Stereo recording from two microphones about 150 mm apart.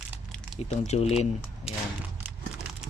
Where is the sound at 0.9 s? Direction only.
45° left (ahead or behind).